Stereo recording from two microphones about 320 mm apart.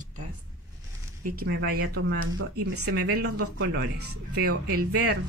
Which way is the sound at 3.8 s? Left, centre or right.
Right.